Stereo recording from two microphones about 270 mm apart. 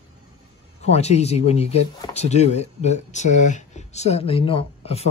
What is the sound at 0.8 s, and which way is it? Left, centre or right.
A man's voice, left.